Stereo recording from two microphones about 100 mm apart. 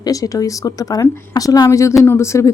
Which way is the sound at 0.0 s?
35° left (ahead or behind).